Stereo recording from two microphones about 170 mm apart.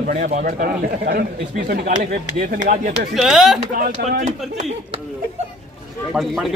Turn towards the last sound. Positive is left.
turn(degrees=0)  # may be behind; listen again after turning